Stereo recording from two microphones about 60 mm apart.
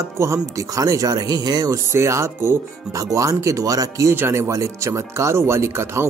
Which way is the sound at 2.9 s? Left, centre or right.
Right.